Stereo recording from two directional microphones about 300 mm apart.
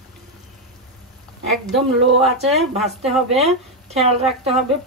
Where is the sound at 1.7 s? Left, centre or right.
Centre.